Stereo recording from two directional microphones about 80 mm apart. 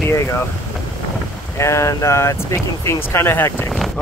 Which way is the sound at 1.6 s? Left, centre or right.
Left.